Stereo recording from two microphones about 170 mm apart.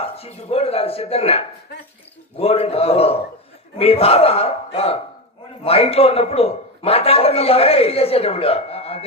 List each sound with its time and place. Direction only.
0.0 s a man's voice: 35° left (ahead or behind)